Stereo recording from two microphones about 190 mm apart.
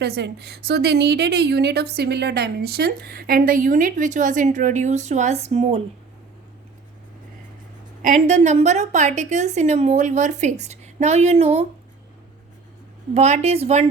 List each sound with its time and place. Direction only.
0.0 s a woman's voice: 60° right (ahead or behind); by 5.8 s 35° right (ahead or behind)
8.0 s a woman's voice: 40° right (ahead or behind)
13.1 s a woman's voice: 35° right (ahead or behind)